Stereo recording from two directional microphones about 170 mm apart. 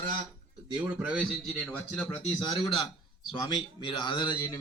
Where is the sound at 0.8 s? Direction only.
10° right (ahead or behind).